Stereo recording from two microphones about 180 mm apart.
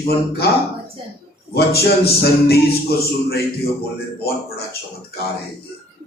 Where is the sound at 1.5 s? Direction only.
60° left (ahead or behind).